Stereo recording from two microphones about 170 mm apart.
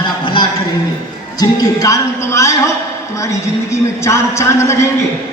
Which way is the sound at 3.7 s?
15° left (ahead or behind).